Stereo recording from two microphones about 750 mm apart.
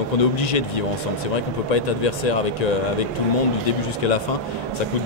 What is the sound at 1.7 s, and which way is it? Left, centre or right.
Speech, left.